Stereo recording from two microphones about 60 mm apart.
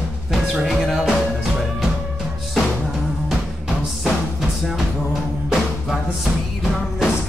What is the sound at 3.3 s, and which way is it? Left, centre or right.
Music, centre.